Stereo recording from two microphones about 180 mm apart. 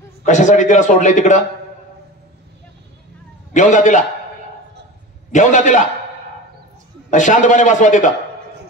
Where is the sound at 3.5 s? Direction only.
45° left (ahead or behind).